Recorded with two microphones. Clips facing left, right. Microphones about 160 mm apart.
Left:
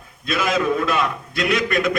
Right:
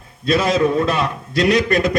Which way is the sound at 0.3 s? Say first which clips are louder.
Right 4 dB; 35° right (ahead or behind).